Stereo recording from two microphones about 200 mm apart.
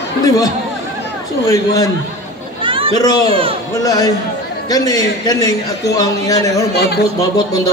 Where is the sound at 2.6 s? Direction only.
25° right (ahead or behind).